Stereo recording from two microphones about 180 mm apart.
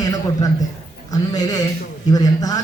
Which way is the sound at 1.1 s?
20° left (ahead or behind).